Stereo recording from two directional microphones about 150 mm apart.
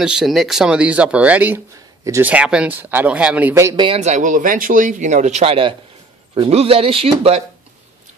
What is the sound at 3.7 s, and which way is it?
Speech, 35° right (ahead or behind).